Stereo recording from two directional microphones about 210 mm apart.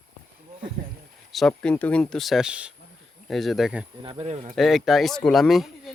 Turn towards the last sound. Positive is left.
turn(degrees=0)  # may be behind; listen again after turning